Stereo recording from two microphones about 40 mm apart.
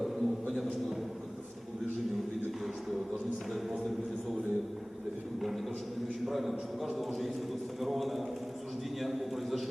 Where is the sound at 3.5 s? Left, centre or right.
Centre.